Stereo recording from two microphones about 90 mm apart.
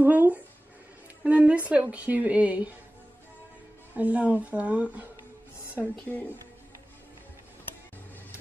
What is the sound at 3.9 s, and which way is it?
Speech, 15° right (ahead or behind).